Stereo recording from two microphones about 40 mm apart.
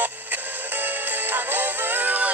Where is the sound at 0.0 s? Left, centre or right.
Right.